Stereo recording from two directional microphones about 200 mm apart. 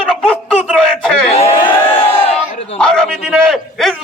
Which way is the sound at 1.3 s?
30° left (ahead or behind).